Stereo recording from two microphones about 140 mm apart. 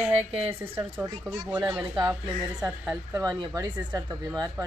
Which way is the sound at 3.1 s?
25° right (ahead or behind).